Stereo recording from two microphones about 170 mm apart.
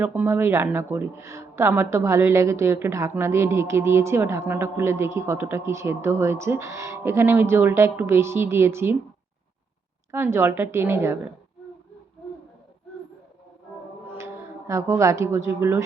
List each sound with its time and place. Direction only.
0.0 s speech: 10° right (ahead or behind)
10.1 s speech: 15° right (ahead or behind)
14.7 s speech: 15° right (ahead or behind)